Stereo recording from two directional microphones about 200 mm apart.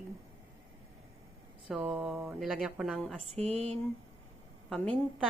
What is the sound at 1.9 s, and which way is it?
A woman's voice, 5° right (ahead or behind).